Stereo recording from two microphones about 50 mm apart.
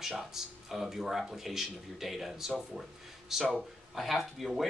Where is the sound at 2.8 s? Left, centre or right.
Centre.